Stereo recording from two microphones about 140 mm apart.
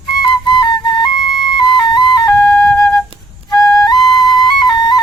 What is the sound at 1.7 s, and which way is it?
Music, 30° left (ahead or behind).